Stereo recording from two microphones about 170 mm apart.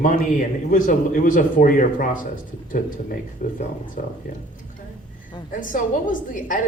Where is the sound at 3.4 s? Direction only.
55° left (ahead or behind).